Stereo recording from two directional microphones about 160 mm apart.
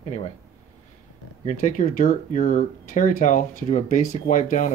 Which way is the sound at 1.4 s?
50° left (ahead or behind).